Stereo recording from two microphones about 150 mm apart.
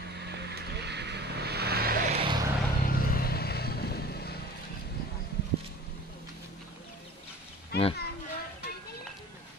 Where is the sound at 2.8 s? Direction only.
75° left (ahead or behind).